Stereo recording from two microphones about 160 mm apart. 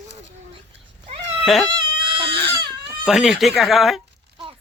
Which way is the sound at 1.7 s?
30° right (ahead or behind).